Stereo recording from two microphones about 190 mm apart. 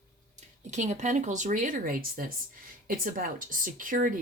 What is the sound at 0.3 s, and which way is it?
Speech, 40° right (ahead or behind).